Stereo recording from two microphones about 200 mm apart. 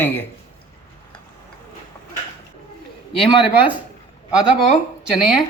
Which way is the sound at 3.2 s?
5° right (ahead or behind).